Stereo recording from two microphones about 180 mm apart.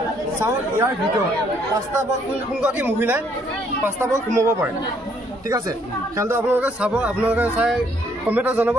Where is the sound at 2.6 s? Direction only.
10° right (ahead or behind).